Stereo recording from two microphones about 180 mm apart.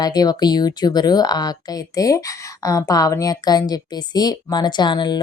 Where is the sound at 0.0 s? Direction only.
20° left (ahead or behind).